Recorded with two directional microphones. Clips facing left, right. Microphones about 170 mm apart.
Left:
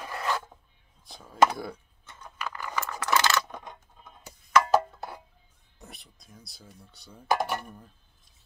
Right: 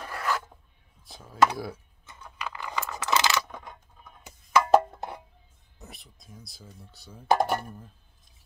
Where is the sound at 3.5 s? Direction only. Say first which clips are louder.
Left 1 dB; 20° left (ahead or behind).